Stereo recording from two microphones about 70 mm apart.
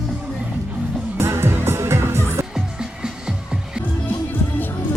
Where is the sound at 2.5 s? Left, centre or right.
Centre.